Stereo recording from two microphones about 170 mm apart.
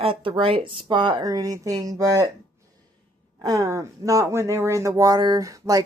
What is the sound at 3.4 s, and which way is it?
Speech, 20° right (ahead or behind).